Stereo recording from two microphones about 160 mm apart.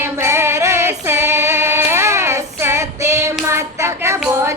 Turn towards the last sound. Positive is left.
turn(degrees=-15)  # may be behind; listen again after turning